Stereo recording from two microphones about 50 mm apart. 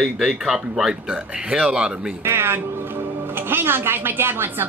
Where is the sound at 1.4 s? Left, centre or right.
Right.